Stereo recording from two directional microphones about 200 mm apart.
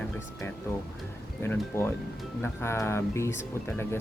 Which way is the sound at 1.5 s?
10° left (ahead or behind).